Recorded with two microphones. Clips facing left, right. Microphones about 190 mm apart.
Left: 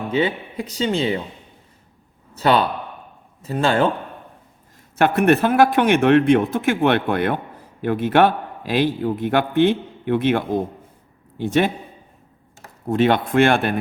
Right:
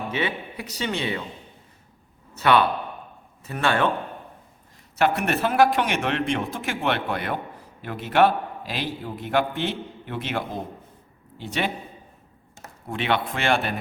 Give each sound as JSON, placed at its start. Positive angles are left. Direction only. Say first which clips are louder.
{"t": 0.1, "sound": "speech", "louder": "left 10 dB", "side_deg": 30}
{"t": 2.4, "sound": "speech", "louder": "left 2 dB", "side_deg": 30}
{"t": 4.9, "sound": "a man's voice", "louder": "left 7 dB", "side_deg": 50}
{"t": 12.9, "sound": "speech", "louder": "left 8 dB", "side_deg": 45}